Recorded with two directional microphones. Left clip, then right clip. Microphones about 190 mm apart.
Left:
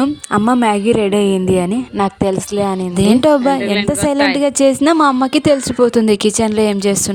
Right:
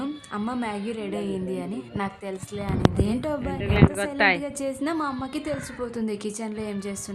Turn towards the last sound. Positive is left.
turn(degrees=50)  # may be behind; listen again after turning